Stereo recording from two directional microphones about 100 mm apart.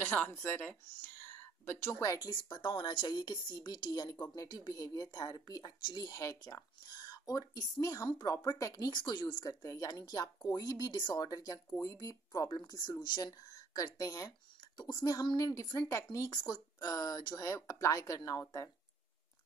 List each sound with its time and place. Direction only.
0.0 s speech: 20° left (ahead or behind); by 2.3 s 35° left (ahead or behind)
2.4 s speech: 55° left (ahead or behind); by 18.4 s 35° left (ahead or behind)